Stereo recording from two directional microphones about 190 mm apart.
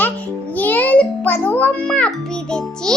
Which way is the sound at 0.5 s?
10° left (ahead or behind).